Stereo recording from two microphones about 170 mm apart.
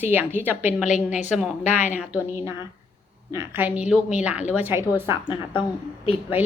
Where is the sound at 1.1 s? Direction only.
45° left (ahead or behind).